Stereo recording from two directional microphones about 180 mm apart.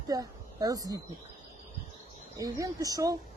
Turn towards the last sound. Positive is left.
turn(degrees=-20)  # may be behind; listen again after turning